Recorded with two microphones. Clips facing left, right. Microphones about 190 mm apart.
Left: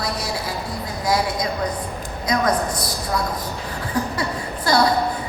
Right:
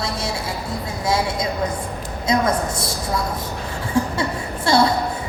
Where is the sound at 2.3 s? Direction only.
25° right (ahead or behind).